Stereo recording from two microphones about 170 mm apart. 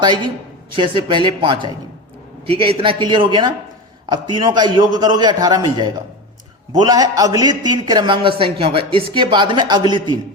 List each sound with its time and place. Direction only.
0.7 s a man's voice: 30° right (ahead or behind)